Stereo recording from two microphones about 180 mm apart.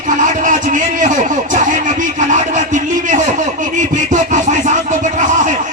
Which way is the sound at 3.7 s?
45° right (ahead or behind).